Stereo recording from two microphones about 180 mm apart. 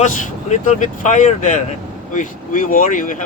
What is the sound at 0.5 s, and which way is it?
Speech, 45° left (ahead or behind).